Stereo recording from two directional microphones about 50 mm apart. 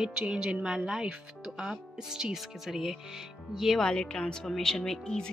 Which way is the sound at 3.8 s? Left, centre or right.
Centre.